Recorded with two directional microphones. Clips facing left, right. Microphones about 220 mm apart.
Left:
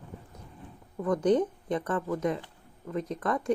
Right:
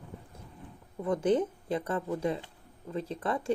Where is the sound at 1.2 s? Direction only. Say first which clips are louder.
Left 2 dB; 5° right (ahead or behind).